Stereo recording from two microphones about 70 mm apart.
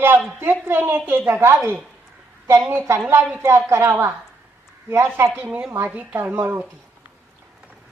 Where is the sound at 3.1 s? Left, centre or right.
Right.